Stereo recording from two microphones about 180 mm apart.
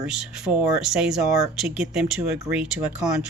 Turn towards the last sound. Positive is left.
turn(degrees=-5)  # may be behind; listen again after turning